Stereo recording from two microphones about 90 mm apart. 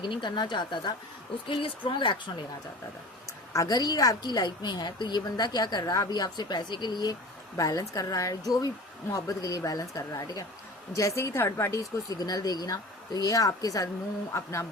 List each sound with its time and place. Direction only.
0.0 s speech: 60° left (ahead or behind)
1.5 s speech: 75° left (ahead or behind)
3.5 s a woman's voice: 45° left (ahead or behind)
14.3 s a woman's voice: 30° left (ahead or behind)